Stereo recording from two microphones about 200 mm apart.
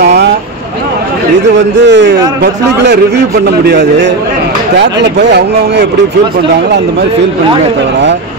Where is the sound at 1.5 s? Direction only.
60° right (ahead or behind).